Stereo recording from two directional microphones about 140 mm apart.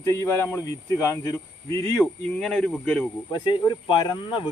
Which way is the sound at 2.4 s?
10° left (ahead or behind).